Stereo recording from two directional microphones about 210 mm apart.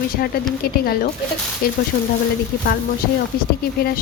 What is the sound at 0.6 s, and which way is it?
A woman's voice, 45° left (ahead or behind).